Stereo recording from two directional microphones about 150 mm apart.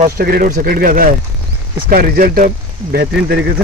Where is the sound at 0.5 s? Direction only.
80° right.